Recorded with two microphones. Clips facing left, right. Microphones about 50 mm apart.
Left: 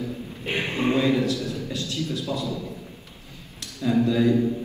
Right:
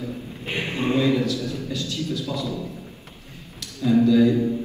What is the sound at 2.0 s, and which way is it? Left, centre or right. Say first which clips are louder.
Speech: right 1 dB; left.